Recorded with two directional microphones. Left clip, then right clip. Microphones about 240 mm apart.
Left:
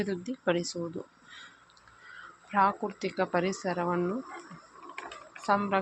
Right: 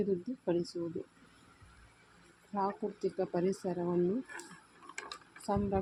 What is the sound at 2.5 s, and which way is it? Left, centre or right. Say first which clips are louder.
Speech: left 9 dB; centre.